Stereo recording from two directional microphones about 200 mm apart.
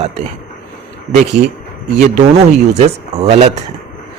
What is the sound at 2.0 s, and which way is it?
Speech, 35° right (ahead or behind).